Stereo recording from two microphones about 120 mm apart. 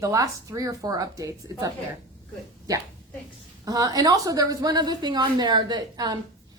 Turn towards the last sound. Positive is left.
turn(degrees=-35)  # may be behind; listen again after turning